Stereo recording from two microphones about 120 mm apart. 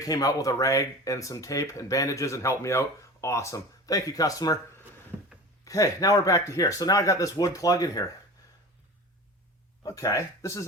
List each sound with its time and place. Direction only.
0.0 s speech: 30° left (ahead or behind)
5.1 s a sound: 10° right (ahead or behind)
5.6 s speech: 30° left (ahead or behind)
9.8 s speech: 30° left (ahead or behind)